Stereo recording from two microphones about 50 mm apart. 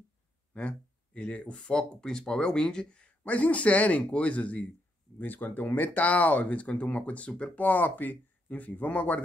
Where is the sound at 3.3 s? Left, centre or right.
Left.